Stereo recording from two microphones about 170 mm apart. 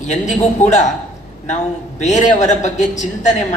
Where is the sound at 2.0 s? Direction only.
45° left (ahead or behind).